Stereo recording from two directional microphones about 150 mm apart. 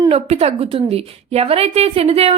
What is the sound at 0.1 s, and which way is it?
A woman's voice, 40° right (ahead or behind).